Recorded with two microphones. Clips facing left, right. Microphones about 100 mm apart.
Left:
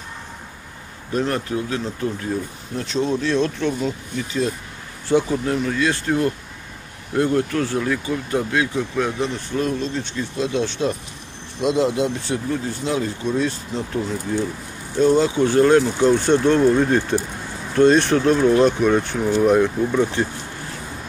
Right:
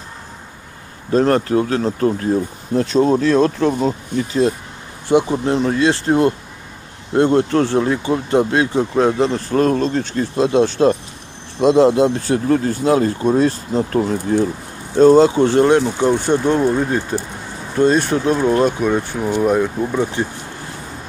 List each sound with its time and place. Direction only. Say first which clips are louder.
1.1 s speech: right 8 dB; 35° right (ahead or behind)
5.3 s speech: right 4 dB; 25° right (ahead or behind); by 15.2 s 40° right (ahead or behind)
15.2 s speech: right 3 dB; 30° right (ahead or behind)
15.7 s speech: right 1 dB; 20° right (ahead or behind)